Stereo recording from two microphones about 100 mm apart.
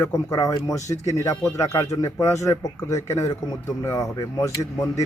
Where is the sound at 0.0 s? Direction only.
35° left (ahead or behind).